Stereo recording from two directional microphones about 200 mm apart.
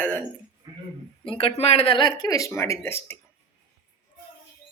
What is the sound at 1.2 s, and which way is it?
Speech, 25° left (ahead or behind).